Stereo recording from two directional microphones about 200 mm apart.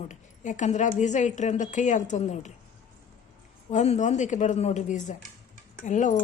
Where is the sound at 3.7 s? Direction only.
35° left (ahead or behind).